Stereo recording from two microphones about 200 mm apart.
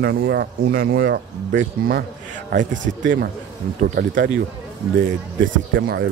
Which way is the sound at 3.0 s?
65° right (ahead or behind).